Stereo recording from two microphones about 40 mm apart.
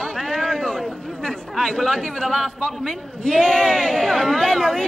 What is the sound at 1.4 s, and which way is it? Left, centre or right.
A man's voice, centre.